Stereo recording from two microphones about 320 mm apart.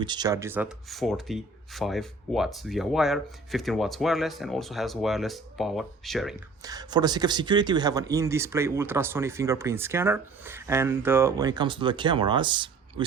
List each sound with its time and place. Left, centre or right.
0.0 s speech: centre
6.6 s speech: centre